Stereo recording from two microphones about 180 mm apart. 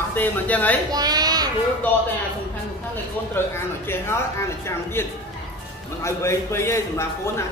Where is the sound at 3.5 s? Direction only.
15° left (ahead or behind).